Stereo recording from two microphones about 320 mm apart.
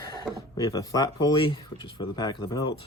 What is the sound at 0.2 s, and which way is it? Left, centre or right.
Speech, centre.